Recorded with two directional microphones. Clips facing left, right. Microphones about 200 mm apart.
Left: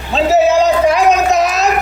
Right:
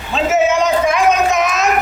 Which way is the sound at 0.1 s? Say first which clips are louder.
Left 3 dB; 35° left (ahead or behind).